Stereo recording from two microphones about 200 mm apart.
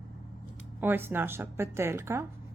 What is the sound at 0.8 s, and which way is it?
A woman's voice, 10° right (ahead or behind).